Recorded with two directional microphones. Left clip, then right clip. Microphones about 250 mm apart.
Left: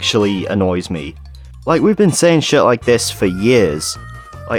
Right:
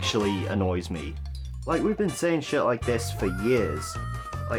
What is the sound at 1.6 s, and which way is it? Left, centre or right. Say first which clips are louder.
Speech: left 13 dB; left.